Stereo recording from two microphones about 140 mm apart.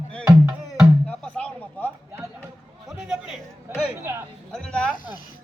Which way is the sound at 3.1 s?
5° right (ahead or behind).